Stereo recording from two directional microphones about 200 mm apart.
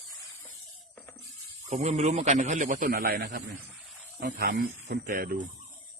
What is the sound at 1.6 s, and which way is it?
A man's voice, 35° right (ahead or behind).